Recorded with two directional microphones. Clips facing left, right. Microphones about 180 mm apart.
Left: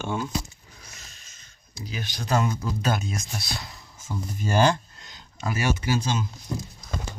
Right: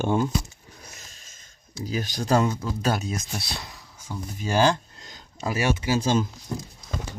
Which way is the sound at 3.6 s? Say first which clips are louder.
Even; 10° right (ahead or behind).